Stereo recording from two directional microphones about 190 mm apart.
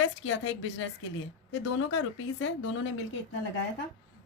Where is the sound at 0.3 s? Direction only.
90° left.